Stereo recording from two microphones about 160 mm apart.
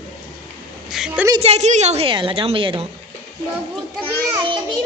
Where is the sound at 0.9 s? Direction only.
5° right (ahead or behind).